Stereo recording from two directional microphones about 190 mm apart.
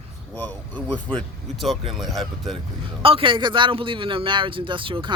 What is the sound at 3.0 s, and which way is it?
Speech, 30° right (ahead or behind).